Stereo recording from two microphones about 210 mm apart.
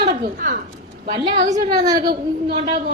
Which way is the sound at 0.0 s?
45° right (ahead or behind).